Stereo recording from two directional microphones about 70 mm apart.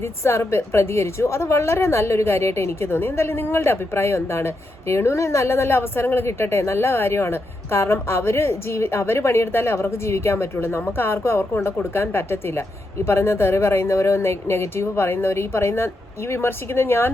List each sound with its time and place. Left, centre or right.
0.0 s a woman's voice: left